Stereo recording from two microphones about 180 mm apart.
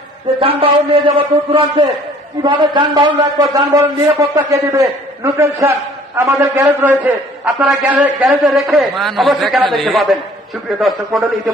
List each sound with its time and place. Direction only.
0.3 s a man's voice: 30° right (ahead or behind)
2.4 s a man's voice: 25° right (ahead or behind); by 11.5 s centre (ahead or behind)